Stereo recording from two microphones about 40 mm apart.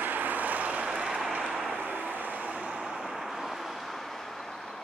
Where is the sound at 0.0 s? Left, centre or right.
Right.